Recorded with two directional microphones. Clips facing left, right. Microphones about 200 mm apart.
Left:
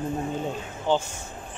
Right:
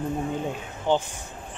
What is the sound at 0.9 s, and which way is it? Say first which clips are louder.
Speech: right 1 dB; 15° right (ahead or behind).